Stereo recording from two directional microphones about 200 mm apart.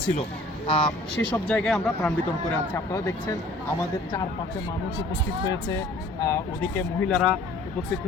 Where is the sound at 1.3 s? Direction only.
5° left (ahead or behind).